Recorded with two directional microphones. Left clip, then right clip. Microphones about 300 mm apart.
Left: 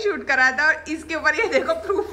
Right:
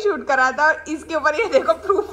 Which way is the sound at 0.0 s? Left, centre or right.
Centre.